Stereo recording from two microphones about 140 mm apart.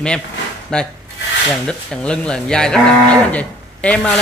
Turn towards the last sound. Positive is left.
turn(degrees=10)  # may be behind; listen again after turning